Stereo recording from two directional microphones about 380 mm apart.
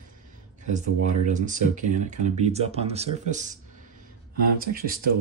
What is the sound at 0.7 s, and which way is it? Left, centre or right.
Speech, centre.